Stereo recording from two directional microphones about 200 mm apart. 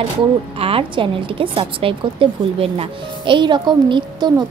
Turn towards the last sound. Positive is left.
turn(degrees=-20)  # may be behind; listen again after turning